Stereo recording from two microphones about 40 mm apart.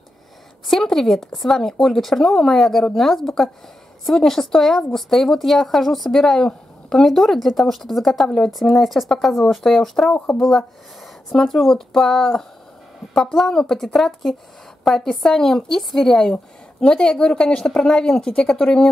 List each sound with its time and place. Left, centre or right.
0.7 s speech: centre
16.8 s a woman's voice: centre